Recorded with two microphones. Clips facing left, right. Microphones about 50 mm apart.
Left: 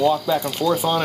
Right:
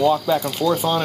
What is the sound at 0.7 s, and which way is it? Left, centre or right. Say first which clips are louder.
Speech: even; centre.